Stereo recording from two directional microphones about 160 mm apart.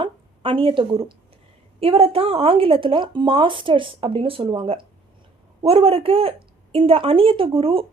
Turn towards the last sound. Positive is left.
turn(degrees=-35)  # may be behind; listen again after turning